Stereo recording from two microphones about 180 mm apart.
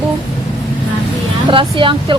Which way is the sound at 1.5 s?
30° right (ahead or behind).